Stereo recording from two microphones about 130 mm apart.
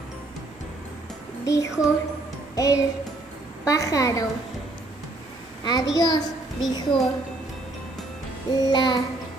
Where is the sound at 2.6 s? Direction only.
25° left (ahead or behind).